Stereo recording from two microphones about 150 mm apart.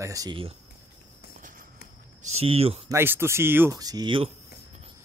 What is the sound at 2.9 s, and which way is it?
Speech, 15° right (ahead or behind).